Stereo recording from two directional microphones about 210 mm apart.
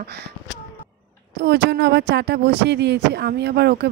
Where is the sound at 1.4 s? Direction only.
55° right (ahead or behind).